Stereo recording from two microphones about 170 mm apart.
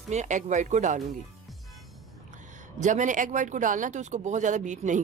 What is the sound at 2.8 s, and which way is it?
Speech, 45° right (ahead or behind).